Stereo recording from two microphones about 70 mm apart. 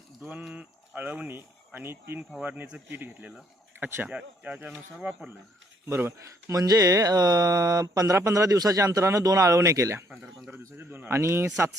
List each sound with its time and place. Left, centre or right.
0.2 s speech: right
1.4 s a man's voice: right
4.1 s speech: centre
5.9 s a man's voice: right
6.5 s a man's voice: right